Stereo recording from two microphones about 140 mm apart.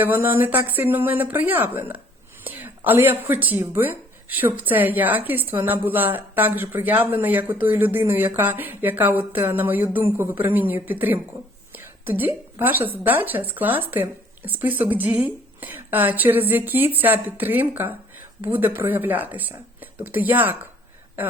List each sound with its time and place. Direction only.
0.0 s a woman's voice: 15° right (ahead or behind)